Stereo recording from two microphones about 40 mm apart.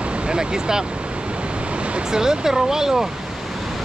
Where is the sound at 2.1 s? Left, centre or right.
Centre.